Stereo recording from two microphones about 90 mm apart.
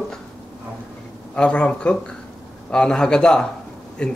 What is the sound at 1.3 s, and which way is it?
Speech, 10° left (ahead or behind).